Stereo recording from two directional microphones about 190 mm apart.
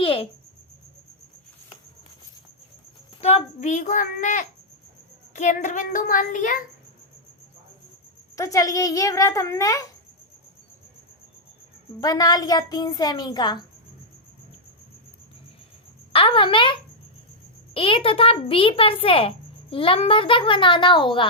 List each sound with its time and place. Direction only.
0.0 s cricket: 30° left (ahead or behind)
3.2 s a child's voice: 35° left (ahead or behind)
8.4 s a child's voice: 15° left (ahead or behind)
11.9 s a child's voice: 20° left (ahead or behind)
16.1 s a child's voice: 25° left (ahead or behind)